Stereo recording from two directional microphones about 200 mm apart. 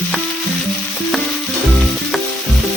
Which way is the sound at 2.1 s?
Centre (ahead or behind).